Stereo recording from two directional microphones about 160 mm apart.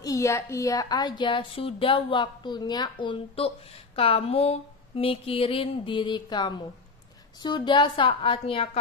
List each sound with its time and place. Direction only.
0.0 s a woman's voice: 20° left (ahead or behind)